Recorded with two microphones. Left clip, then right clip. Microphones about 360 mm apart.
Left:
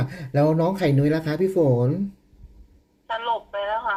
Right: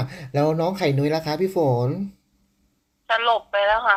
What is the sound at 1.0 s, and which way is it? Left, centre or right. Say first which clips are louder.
Speech: even; right.